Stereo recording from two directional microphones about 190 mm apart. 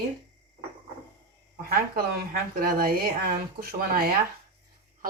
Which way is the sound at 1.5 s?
50° right (ahead or behind).